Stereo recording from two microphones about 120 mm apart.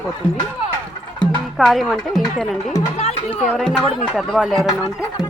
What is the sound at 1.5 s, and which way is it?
Speech, centre (ahead or behind).